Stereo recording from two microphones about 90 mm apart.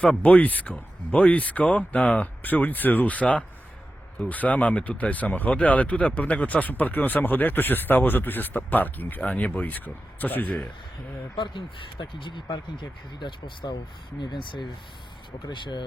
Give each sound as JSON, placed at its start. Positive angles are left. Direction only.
{"t": 0.0, "sound": "speech", "side_deg": 15}
{"t": 11.3, "sound": "speech", "side_deg": 60}